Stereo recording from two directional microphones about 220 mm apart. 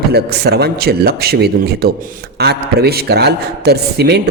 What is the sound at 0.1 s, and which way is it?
A man's voice, 45° right (ahead or behind).